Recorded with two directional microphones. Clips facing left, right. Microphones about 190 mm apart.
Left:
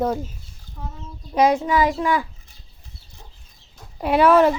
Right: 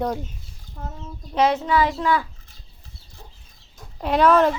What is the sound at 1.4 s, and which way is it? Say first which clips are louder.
Speech: left 2 dB; 10° left (ahead or behind).